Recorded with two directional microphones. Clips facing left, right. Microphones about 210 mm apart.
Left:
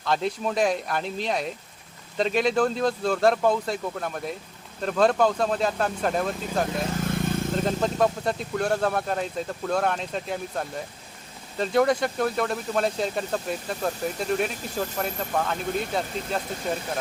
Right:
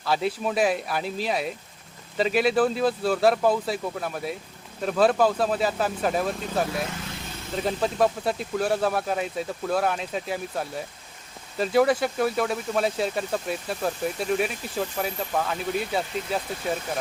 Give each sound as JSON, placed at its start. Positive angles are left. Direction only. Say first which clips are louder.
{"t": 0.0, "sound": "speech", "louder": "even", "side_deg": -5}
{"t": 6.9, "sound": "vehicle", "louder": "left 10 dB", "side_deg": 50}
{"t": 7.5, "sound": "speech", "louder": "right 4 dB", "side_deg": -5}